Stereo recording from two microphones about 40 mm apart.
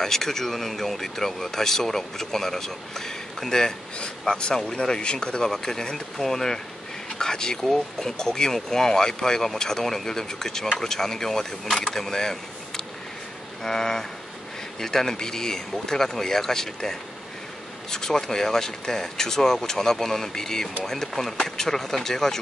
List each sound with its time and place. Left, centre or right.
0.0 s speech: centre
4.3 s speech: left
7.6 s speech: centre